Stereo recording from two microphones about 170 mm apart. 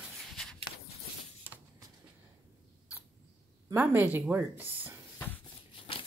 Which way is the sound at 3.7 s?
10° right (ahead or behind).